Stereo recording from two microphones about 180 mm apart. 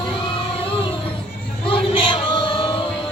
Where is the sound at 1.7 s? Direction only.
30° left (ahead or behind).